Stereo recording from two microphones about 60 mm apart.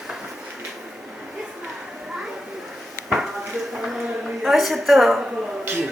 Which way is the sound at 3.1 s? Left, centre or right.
Centre.